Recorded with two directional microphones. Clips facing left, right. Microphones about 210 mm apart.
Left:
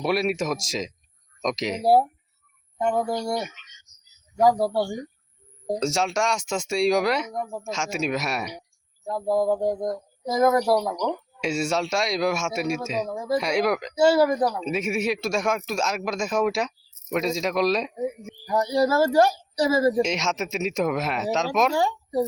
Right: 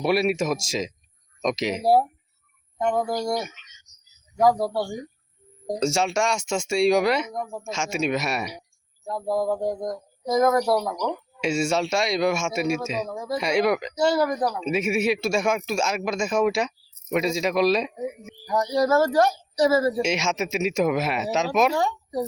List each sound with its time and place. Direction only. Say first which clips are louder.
0.0 s speech: right 2 dB; centre (ahead or behind)
5.6 s speech: right 1 dB; centre (ahead or behind)
18.4 s speech: even; 10° left (ahead or behind)
20.0 s speech: even; 5° right (ahead or behind)
21.8 s speech: left 2 dB; 10° left (ahead or behind)